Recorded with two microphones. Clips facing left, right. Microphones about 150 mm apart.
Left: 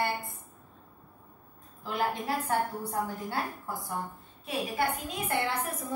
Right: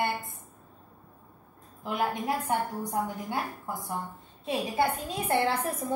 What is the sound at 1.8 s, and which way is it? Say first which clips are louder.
A woman's voice: right 1 dB; 20° right (ahead or behind).